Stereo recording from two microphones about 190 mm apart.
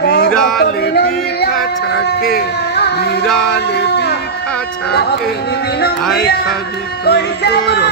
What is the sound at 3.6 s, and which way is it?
Music, 60° left (ahead or behind).